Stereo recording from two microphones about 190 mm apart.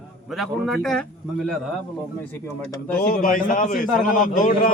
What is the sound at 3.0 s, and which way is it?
A man's voice, 50° left (ahead or behind).